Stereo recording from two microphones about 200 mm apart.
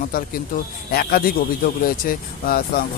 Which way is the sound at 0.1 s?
45° left (ahead or behind).